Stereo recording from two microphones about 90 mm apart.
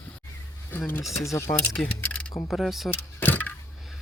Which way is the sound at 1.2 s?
35° left (ahead or behind).